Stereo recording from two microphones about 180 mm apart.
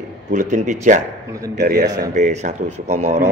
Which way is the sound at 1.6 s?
55° right (ahead or behind).